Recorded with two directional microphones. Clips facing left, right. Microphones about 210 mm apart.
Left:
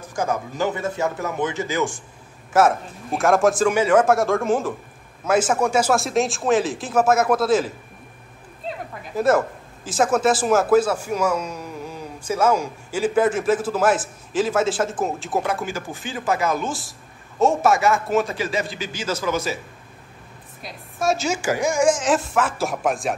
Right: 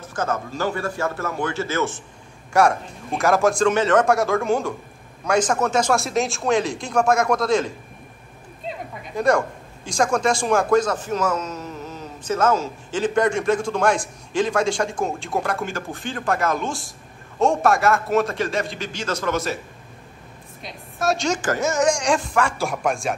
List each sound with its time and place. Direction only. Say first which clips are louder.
0.0 s a man's voice: left 1 dB; 10° left (ahead or behind)
2.5 s speech: left 1 dB; centre (ahead or behind)
8.6 s a sound: left 1 dB; 5° left (ahead or behind)
9.8 s speech: left 2 dB; 5° left (ahead or behind)
20.6 s speech: left 1 dB; centre (ahead or behind)